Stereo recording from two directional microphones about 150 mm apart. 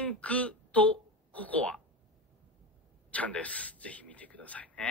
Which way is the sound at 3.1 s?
10° left (ahead or behind).